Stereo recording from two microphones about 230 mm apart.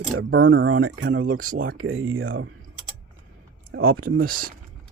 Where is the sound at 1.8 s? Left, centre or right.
Right.